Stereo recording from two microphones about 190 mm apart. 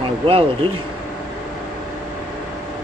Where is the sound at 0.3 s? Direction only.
30° right (ahead or behind).